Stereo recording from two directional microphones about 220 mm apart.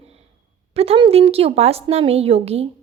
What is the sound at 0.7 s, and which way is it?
A woman's voice, 25° right (ahead or behind).